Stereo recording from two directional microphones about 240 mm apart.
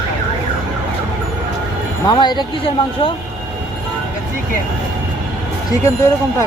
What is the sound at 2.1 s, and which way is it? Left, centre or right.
Speech, centre.